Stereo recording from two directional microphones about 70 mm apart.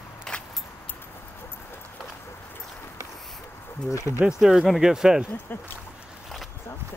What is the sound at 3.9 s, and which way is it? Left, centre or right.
Speech, left.